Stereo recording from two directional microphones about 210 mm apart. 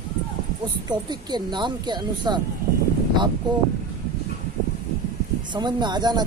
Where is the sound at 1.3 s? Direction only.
20° right (ahead or behind).